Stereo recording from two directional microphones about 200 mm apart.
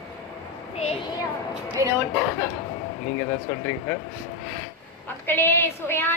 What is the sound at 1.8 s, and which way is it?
Speech, 15° right (ahead or behind).